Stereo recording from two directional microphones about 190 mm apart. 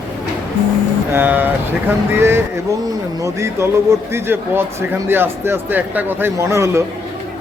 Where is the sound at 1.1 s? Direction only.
10° right (ahead or behind).